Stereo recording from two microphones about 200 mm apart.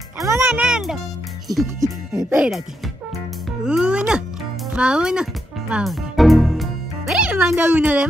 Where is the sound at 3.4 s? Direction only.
5° right (ahead or behind).